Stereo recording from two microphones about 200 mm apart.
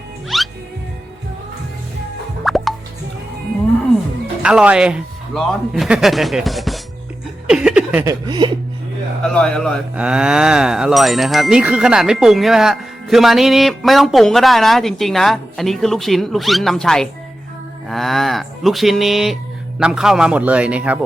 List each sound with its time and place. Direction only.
0.3 s music: centre (ahead or behind)
2.4 s music: centre (ahead or behind)
4.4 s speech: 5° right (ahead or behind)
7.4 s a sound: 5° right (ahead or behind)
8.3 s speech: 25° right (ahead or behind)
9.2 s speech: 5° left (ahead or behind)